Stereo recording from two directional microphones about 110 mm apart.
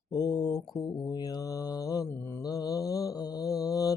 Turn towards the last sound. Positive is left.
turn(degrees=30)  # may be behind; listen again after turning